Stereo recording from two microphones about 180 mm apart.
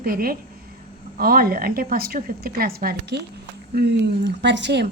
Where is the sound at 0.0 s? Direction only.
55° right (ahead or behind).